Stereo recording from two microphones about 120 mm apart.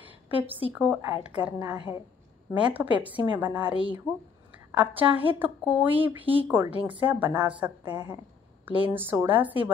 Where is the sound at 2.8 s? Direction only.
10° right (ahead or behind).